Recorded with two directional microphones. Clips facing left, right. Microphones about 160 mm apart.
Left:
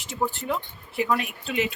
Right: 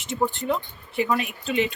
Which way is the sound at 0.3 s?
Centre (ahead or behind).